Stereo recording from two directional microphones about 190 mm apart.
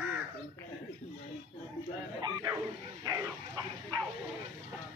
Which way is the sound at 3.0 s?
20° right (ahead or behind).